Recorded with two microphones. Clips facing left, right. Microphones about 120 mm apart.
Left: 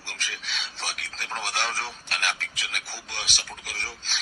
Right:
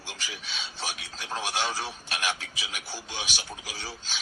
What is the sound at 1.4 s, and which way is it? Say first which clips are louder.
Speech: even; 15° right (ahead or behind).